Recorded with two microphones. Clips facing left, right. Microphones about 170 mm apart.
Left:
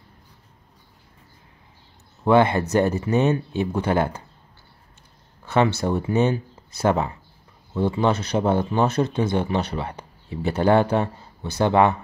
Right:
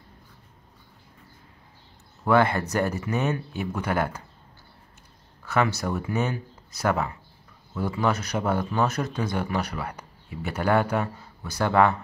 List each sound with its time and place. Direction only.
2.2 s speech: 20° left (ahead or behind)
5.4 s speech: 25° left (ahead or behind)